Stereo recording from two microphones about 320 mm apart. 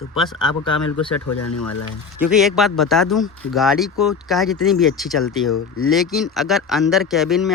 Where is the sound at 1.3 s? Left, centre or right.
Left.